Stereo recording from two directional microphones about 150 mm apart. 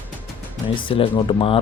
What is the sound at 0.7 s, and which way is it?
Speech, 35° left (ahead or behind).